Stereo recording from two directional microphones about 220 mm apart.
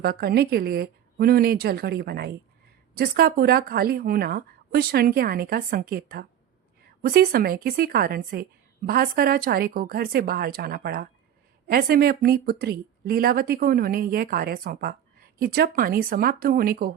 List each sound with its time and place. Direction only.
0.0 s speech: 45° right (ahead or behind)